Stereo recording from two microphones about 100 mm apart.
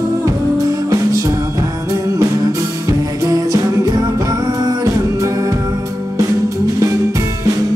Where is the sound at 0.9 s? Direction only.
35° right (ahead or behind).